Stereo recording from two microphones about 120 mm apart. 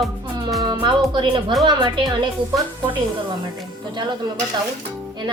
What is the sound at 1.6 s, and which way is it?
Speech, 40° right (ahead or behind).